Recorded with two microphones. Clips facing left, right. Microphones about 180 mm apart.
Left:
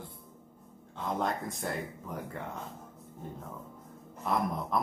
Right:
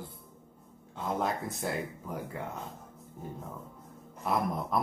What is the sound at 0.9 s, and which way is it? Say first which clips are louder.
Speech: right 1 dB; 5° right (ahead or behind).